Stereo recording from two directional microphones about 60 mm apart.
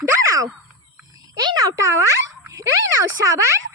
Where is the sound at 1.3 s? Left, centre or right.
Right.